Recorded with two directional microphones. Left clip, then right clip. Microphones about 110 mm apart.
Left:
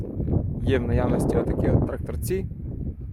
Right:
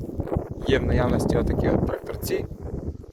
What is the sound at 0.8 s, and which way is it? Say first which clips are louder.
Speech: right 1 dB; 50° left (ahead or behind).